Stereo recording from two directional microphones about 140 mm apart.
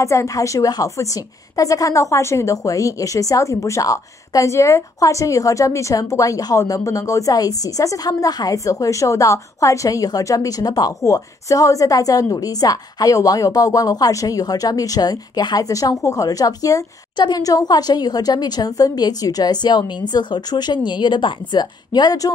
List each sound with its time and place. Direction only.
0.0 s a woman's voice: 20° left (ahead or behind)